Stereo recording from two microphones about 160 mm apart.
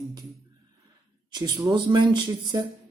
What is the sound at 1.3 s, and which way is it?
Speech, 25° right (ahead or behind).